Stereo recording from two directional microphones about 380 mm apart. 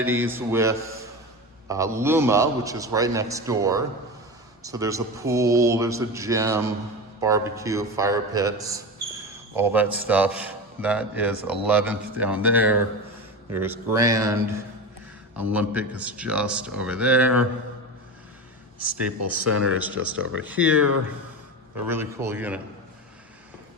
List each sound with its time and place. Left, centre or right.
0.0 s a man's voice: centre
15.4 s a man's voice: centre
18.9 s a man's voice: centre
19.2 s speech: right
21.8 s a man's voice: centre